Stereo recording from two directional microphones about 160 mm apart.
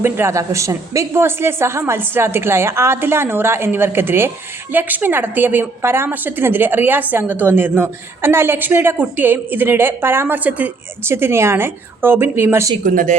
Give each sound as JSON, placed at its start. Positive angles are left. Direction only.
{"t": 0.0, "sound": "a woman's voice", "side_deg": -15}
{"t": 12.8, "sound": "speech", "side_deg": -60}